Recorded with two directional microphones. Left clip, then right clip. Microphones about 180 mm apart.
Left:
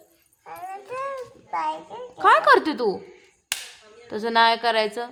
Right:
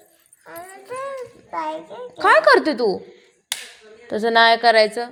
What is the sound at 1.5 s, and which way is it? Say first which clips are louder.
Speech: even; 15° left (ahead or behind).